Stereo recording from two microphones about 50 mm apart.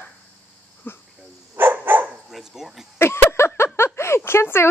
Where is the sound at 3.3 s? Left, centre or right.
Left.